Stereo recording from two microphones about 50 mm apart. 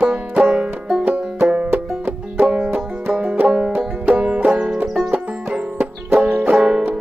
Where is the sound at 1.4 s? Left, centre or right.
Centre.